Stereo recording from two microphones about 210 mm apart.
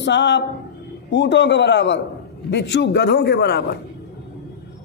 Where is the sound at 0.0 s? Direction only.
55° left (ahead or behind).